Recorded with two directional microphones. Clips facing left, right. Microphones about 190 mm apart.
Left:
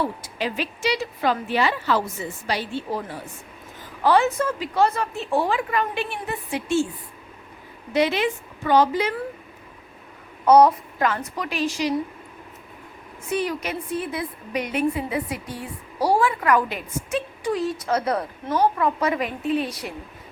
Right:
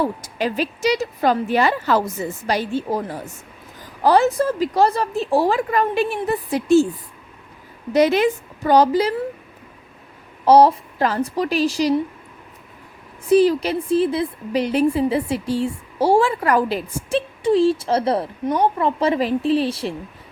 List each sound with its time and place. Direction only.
0.0 s a woman's voice: 45° right (ahead or behind)
7.9 s a woman's voice: 45° right (ahead or behind)
10.4 s a woman's voice: 30° right (ahead or behind)
13.2 s a woman's voice: 35° right (ahead or behind)